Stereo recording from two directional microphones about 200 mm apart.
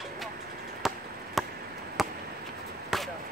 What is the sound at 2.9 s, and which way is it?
Chop, centre (ahead or behind).